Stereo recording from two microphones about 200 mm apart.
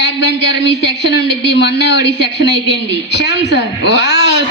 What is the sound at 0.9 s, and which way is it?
A man's voice, 60° left (ahead or behind).